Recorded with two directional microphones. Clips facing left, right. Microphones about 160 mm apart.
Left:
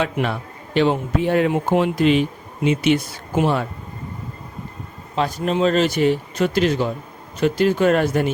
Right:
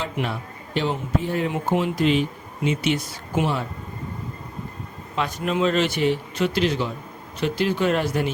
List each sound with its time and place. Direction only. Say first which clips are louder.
0.0 s a man's voice: left 5 dB; 70° left (ahead or behind)
5.1 s speech: left 4 dB; 35° left (ahead or behind)